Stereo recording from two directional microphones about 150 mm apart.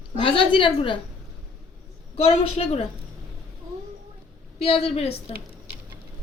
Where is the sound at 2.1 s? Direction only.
40° left (ahead or behind).